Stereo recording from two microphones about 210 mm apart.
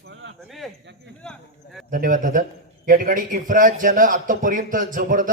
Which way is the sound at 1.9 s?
40° right (ahead or behind).